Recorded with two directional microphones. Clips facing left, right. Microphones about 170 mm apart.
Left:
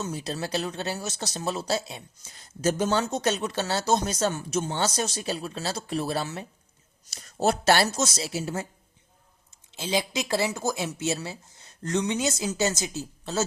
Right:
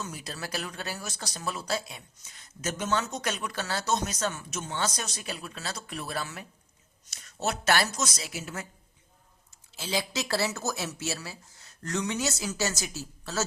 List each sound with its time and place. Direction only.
0.0 s a woman's voice: 25° left (ahead or behind)
9.7 s speech: 20° left (ahead or behind)